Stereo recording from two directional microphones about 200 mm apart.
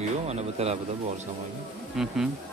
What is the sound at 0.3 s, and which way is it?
Speech, 30° right (ahead or behind).